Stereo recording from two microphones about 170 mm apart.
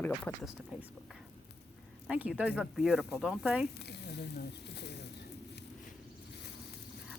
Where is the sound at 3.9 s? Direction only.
80° left.